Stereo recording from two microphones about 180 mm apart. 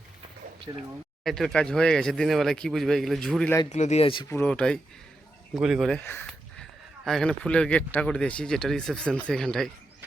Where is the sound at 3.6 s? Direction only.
40° left (ahead or behind).